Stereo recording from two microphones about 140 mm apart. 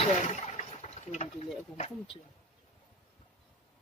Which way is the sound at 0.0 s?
55° left (ahead or behind).